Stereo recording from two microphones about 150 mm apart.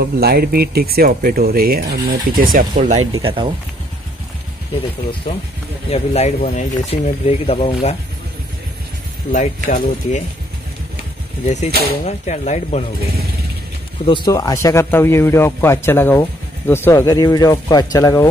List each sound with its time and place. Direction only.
0.0 s speech: 90° right; by 2.9 s 70° right (ahead or behind)
3.2 s speech: 35° right (ahead or behind)
5.9 s speech: 45° left (ahead or behind)
6.9 s speech: 40° left (ahead or behind)
9.3 s speech: 55° left (ahead or behind)
11.4 s speech: 50° left (ahead or behind)
14.0 s speech: 30° left (ahead or behind)
14.3 s a man's voice: 20° left (ahead or behind)